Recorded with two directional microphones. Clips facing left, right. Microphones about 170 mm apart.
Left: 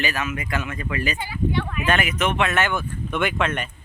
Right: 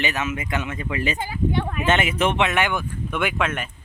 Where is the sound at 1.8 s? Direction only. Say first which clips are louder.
Right 2 dB; 25° right (ahead or behind); by 3.6 s 5° right (ahead or behind).